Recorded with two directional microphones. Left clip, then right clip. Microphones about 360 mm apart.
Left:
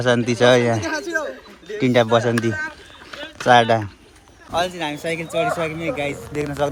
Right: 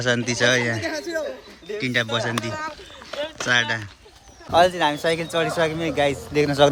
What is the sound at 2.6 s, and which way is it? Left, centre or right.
Run, centre.